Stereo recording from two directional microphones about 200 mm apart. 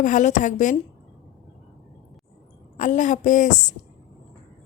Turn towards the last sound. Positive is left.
turn(degrees=35)  # may be behind; listen again after turning